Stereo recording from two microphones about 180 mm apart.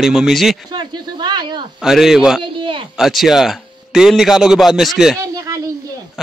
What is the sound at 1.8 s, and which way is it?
Speech, centre (ahead or behind).